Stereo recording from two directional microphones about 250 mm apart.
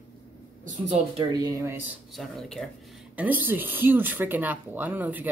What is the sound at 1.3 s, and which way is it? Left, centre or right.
Speech, centre.